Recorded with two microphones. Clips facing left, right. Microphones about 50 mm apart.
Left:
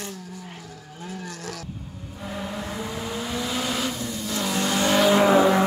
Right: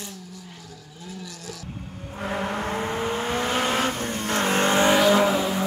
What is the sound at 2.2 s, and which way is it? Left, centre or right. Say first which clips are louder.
Vehicle: right 5 dB; right.